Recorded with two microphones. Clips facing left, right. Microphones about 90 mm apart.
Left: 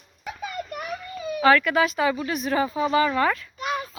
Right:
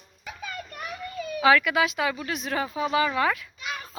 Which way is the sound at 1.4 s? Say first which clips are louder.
Left 2 dB; 5° right (ahead or behind).